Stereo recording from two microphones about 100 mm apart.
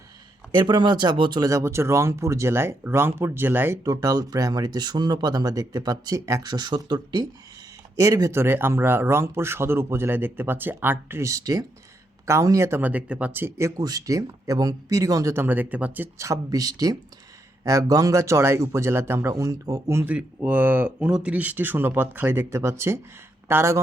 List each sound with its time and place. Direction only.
0.5 s speech: 50° right (ahead or behind)
1.5 s speech: 30° right (ahead or behind)
3.8 s speech: 35° right (ahead or behind)
6.4 s speech: 45° right (ahead or behind)
7.9 s speech: 35° right (ahead or behind)
12.8 s speech: 15° right (ahead or behind)
13.7 s speech: 35° right (ahead or behind); by 16.0 s 15° right (ahead or behind)
16.1 s speech: 30° right (ahead or behind)
20.1 s speech: 15° right (ahead or behind)